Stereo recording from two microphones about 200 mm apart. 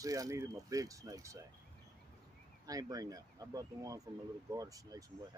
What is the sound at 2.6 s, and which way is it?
Speech, 20° right (ahead or behind).